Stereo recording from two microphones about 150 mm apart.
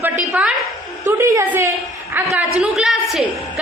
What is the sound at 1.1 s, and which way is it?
A woman's voice, 20° right (ahead or behind).